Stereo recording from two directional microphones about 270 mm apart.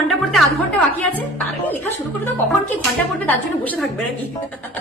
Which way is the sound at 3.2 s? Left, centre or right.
Centre.